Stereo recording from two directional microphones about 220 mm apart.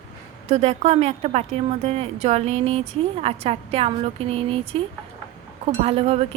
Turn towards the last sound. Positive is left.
turn(degrees=-25)  # may be behind; listen again after turning